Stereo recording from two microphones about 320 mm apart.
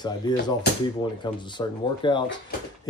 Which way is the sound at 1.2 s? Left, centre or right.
Centre.